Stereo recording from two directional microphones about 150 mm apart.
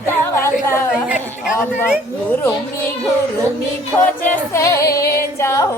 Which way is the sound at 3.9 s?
15° left (ahead or behind).